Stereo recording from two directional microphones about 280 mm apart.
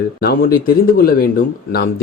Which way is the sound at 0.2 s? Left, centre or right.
Left.